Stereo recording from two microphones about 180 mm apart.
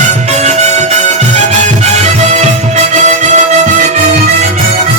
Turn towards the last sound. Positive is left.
turn(degrees=-40)  # may be behind; listen again after turning